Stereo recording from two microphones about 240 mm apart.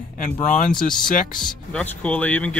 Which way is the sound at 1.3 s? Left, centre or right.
Centre.